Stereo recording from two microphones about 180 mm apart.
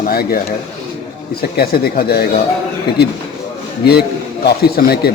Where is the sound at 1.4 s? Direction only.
60° left (ahead or behind).